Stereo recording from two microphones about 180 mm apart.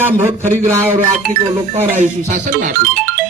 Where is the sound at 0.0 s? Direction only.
10° right (ahead or behind).